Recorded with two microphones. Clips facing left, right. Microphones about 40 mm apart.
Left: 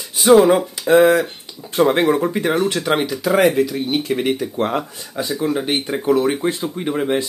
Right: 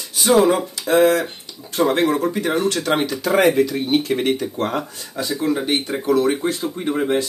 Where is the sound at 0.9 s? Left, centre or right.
Left.